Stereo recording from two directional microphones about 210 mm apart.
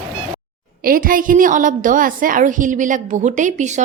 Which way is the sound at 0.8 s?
40° right (ahead or behind).